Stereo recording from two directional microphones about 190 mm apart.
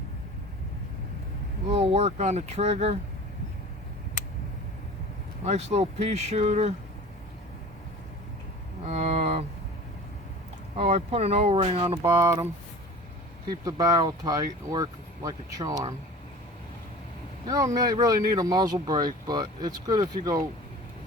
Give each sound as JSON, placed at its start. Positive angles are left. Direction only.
{"t": 1.7, "sound": "speech", "side_deg": -35}
{"t": 5.7, "sound": "speech", "side_deg": -35}
{"t": 8.9, "sound": "speech", "side_deg": -35}
{"t": 10.8, "sound": "speech", "side_deg": -35}
{"t": 12.0, "sound": "speech", "side_deg": -15}
{"t": 13.5, "sound": "speech", "side_deg": -20}
{"t": 17.7, "sound": "speech", "side_deg": -20}